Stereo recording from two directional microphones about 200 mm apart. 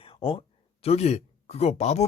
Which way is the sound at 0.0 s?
25° left (ahead or behind).